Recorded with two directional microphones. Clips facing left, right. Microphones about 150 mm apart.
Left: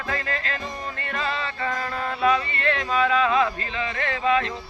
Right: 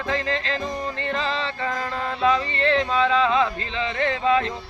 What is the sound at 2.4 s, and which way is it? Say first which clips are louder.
Music: right 4 dB; 30° right (ahead or behind).